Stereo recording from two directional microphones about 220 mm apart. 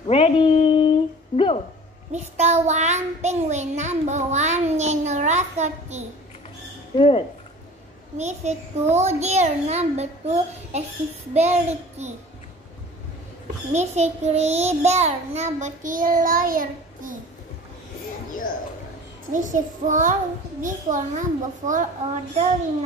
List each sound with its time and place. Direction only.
0.0 s a sound: 25° left (ahead or behind)
2.1 s child singing: 30° right (ahead or behind)
7.0 s speech: 25° left (ahead or behind)
8.2 s a child's voice: 30° right (ahead or behind)
13.7 s a child's voice: 30° right (ahead or behind)
19.3 s a child's voice: 35° right (ahead or behind)